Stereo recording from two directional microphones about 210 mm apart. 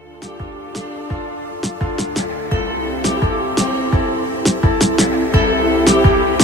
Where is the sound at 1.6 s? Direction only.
Centre (ahead or behind).